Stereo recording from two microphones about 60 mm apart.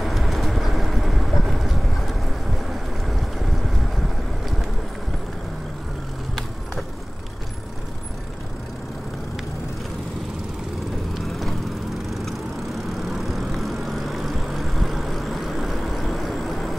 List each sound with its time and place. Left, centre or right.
0.0 s vehicle: centre
11.1 s vehicle: centre
13.0 s vehicle: centre